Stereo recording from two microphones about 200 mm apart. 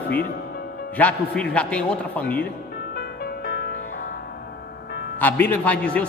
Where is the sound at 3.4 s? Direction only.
55° left (ahead or behind).